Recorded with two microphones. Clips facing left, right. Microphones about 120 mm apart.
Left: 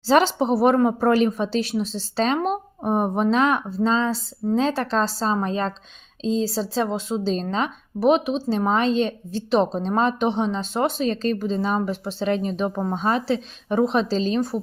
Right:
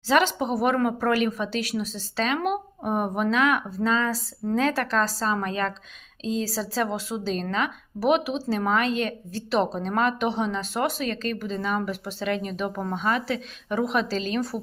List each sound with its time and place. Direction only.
0.1 s speech: 35° left (ahead or behind)